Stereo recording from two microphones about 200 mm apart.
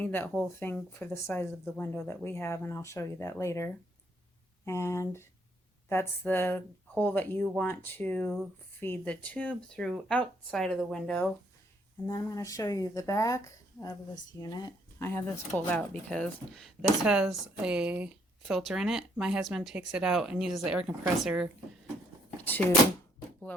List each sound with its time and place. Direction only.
0.0 s speech: 10° left (ahead or behind)
12.0 s speech: 15° left (ahead or behind); by 21.4 s 5° right (ahead or behind)